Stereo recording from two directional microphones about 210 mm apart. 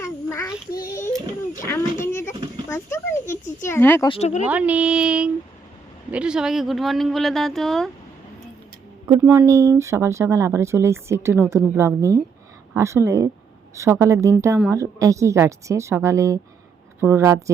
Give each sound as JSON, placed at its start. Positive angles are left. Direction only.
{"t": 0.0, "sound": "child singing", "side_deg": 15}
{"t": 1.6, "sound": "a sound", "side_deg": 10}
{"t": 2.6, "sound": "a child's voice", "side_deg": 10}
{"t": 4.1, "sound": "speech", "side_deg": 30}
{"t": 4.4, "sound": "speech", "side_deg": -5}
{"t": 9.0, "sound": "speech", "side_deg": -15}